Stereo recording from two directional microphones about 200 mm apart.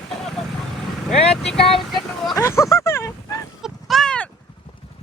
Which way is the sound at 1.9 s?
Centre (ahead or behind).